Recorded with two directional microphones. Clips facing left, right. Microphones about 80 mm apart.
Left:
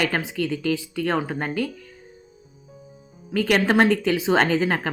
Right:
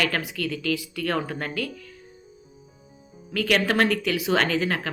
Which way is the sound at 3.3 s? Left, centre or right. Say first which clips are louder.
Left 3 dB; left.